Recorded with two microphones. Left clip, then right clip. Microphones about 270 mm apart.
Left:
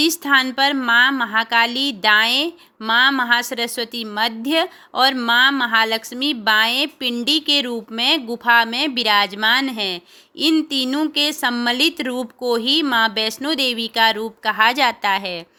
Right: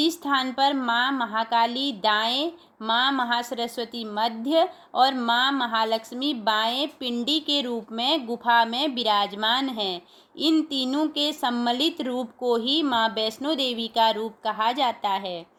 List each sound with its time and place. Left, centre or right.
0.0 s a woman's voice: left